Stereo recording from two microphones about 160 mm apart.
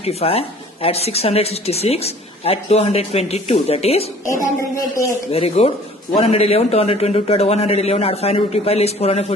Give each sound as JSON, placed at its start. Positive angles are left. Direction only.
{"t": 0.0, "sound": "a woman's voice", "side_deg": 40}
{"t": 4.3, "sound": "speech", "side_deg": 20}
{"t": 5.3, "sound": "a woman's voice", "side_deg": 40}